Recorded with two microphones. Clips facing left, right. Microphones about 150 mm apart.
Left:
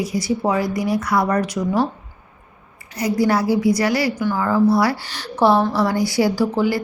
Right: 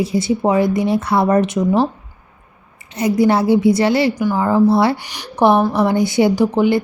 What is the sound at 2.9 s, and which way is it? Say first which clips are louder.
A woman's voice: right 4 dB; 20° right (ahead or behind).